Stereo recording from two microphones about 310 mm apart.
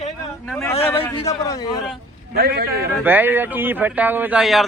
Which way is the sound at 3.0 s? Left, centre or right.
Centre.